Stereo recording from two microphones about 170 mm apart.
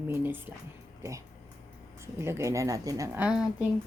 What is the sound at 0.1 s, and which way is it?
Speech, 10° right (ahead or behind).